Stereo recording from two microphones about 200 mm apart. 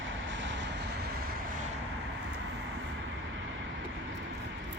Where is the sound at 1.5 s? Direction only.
40° right (ahead or behind).